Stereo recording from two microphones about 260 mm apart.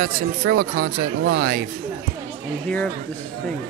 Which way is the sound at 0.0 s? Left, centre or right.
Right.